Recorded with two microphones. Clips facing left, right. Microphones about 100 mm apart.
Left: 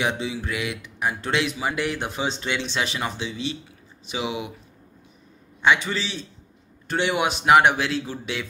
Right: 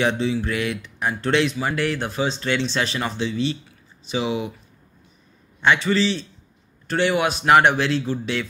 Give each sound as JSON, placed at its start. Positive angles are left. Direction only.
{"t": 0.0, "sound": "speech", "side_deg": 10}
{"t": 5.6, "sound": "speech", "side_deg": 10}
{"t": 7.4, "sound": "speech", "side_deg": 10}